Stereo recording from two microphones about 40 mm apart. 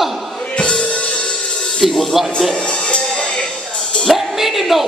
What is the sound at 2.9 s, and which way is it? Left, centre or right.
Music, left.